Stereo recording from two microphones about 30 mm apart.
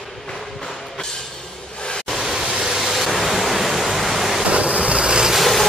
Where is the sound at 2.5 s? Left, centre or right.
Centre.